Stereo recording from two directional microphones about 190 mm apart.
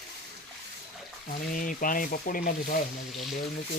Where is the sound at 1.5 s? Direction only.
45° left (ahead or behind).